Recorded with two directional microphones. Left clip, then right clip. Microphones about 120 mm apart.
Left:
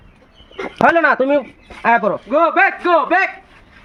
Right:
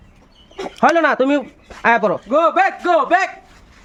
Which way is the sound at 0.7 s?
60° right (ahead or behind).